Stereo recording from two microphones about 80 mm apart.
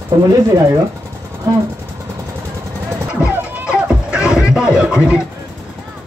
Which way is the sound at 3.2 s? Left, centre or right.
Centre.